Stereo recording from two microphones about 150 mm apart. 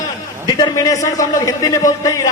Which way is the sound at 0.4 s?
25° left (ahead or behind).